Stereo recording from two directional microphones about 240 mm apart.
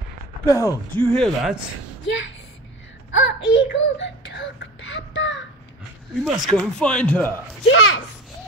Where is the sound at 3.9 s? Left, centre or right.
Left.